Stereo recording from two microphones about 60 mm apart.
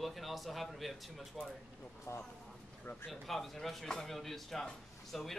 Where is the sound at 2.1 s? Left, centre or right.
Left.